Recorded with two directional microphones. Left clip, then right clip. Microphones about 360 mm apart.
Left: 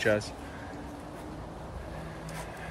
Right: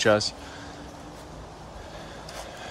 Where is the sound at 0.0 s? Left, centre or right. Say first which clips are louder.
Right 6 dB; centre.